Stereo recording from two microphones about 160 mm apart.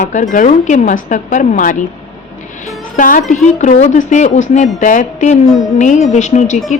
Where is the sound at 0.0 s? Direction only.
50° left (ahead or behind).